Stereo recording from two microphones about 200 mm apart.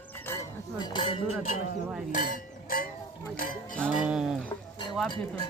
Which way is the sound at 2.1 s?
40° left (ahead or behind).